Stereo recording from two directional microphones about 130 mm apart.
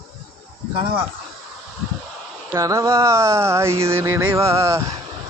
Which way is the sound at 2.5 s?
25° right (ahead or behind).